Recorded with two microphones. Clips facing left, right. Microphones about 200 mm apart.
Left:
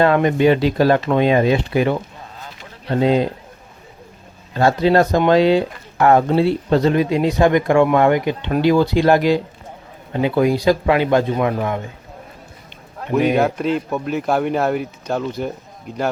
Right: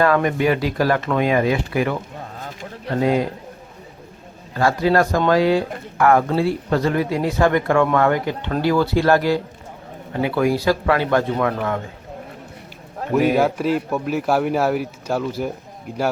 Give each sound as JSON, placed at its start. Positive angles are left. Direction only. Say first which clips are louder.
{"t": 0.0, "sound": "speech", "louder": "left 3 dB", "side_deg": 25}
{"t": 2.4, "sound": "a sound", "louder": "right 4 dB", "side_deg": -45}
{"t": 2.9, "sound": "speech", "louder": "left 3 dB", "side_deg": 25}
{"t": 4.5, "sound": "speech", "louder": "left 3 dB", "side_deg": 25}
{"t": 13.1, "sound": "speech", "louder": "left 1 dB", "side_deg": -5}